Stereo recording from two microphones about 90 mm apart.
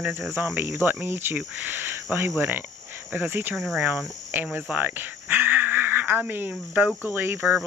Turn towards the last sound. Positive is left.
turn(degrees=-20)  # may be behind; listen again after turning